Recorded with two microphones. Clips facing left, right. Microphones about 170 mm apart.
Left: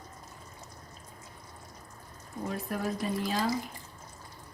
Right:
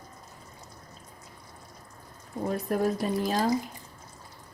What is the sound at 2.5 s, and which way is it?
Speech, 40° right (ahead or behind).